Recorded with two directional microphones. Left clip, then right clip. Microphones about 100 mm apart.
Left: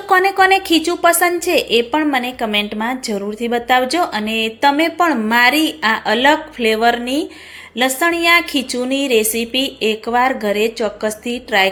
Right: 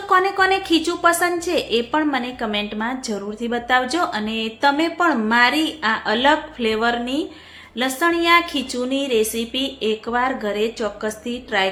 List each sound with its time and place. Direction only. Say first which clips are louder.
0.1 s a woman's voice: left 5 dB; 40° left (ahead or behind)